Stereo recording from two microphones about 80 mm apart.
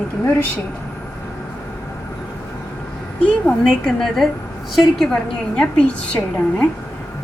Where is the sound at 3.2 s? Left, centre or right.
Centre.